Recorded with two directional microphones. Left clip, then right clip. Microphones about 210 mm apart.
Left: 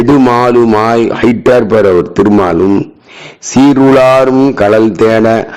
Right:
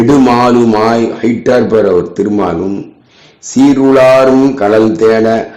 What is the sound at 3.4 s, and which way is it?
Speech, 40° left (ahead or behind).